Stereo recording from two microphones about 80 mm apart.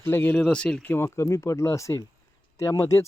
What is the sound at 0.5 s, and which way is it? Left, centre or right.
Speech, centre.